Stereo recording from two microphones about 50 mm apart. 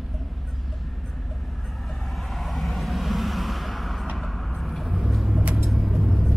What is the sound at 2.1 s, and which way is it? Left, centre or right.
Vehicle, centre.